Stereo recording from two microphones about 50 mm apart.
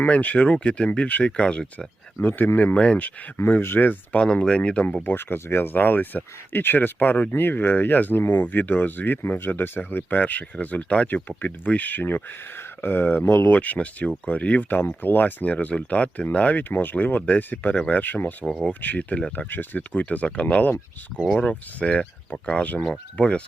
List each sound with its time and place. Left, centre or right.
0.0 s speech: left
2.2 s speech: left
2.7 s speech: left
3.3 s speech: left
4.2 s speech: left
5.0 s speech: left
12.5 s speech: left
13.5 s speech: left
14.7 s speech: left
19.5 s speech: left
19.9 s speech: left